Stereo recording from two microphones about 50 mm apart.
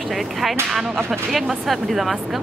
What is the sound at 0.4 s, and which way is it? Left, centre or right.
Speech, centre.